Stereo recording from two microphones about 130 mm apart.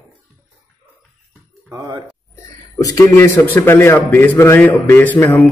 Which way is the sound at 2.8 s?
25° left (ahead or behind).